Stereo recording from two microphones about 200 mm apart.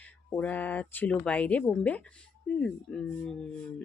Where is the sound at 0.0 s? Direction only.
5° left (ahead or behind).